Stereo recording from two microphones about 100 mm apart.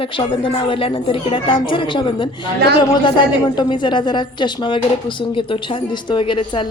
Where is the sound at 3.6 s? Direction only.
50° left (ahead or behind).